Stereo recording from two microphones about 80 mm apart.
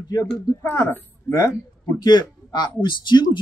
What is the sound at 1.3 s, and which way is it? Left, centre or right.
Speech, left.